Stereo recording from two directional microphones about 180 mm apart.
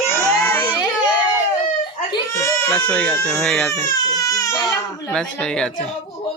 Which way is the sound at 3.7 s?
15° left (ahead or behind).